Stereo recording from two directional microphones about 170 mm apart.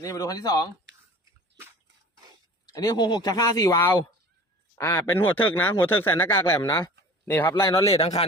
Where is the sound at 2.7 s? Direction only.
20° left (ahead or behind).